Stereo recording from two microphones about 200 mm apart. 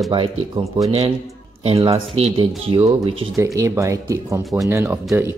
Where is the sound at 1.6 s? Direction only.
30° right (ahead or behind); by 5.3 s 10° right (ahead or behind).